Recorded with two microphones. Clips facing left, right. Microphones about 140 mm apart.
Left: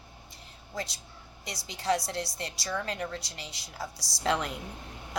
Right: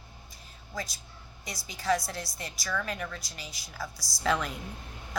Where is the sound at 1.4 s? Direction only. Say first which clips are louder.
Even; 75° left (ahead or behind).